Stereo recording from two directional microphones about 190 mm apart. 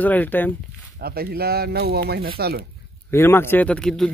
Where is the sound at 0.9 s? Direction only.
55° right (ahead or behind).